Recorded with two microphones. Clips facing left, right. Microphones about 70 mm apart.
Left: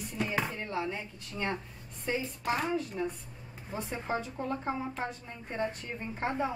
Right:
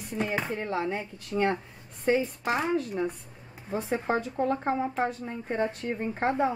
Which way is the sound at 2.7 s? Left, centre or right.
Right.